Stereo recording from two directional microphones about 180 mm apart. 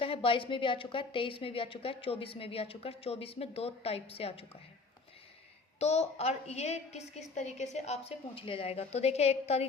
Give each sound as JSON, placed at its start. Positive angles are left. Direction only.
{"t": 0.0, "sound": "a woman's voice", "side_deg": 30}
{"t": 5.8, "sound": "a woman's voice", "side_deg": 35}